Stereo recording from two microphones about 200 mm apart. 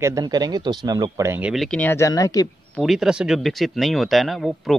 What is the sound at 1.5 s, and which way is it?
Speech, centre (ahead or behind).